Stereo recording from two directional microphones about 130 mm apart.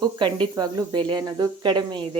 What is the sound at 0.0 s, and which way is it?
Speech, 35° right (ahead or behind).